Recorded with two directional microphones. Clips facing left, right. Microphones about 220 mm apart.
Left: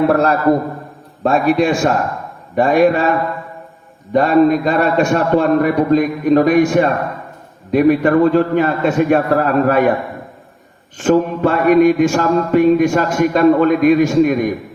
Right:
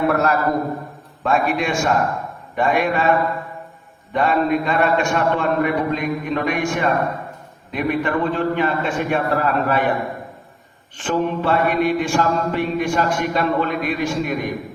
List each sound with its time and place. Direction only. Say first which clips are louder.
0.1 s a man's voice: left 6 dB; 30° left (ahead or behind)
4.1 s a man's voice: left 7 dB; 40° left (ahead or behind)
10.9 s mantra: left 7 dB; 45° left (ahead or behind)